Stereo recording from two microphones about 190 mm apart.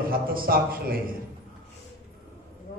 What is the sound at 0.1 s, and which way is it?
Speech, 50° right (ahead or behind).